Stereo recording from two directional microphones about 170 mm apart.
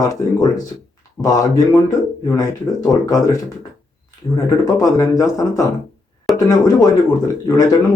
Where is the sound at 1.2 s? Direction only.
20° left (ahead or behind).